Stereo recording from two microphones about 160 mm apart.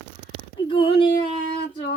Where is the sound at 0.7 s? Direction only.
35° left (ahead or behind).